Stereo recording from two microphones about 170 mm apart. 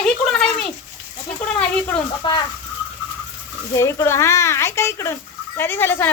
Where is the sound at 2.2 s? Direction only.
30° left (ahead or behind).